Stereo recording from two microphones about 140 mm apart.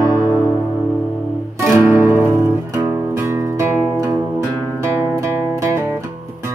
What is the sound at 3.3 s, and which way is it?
Music, 20° right (ahead or behind).